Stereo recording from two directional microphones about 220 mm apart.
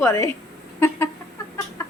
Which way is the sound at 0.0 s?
10° left (ahead or behind).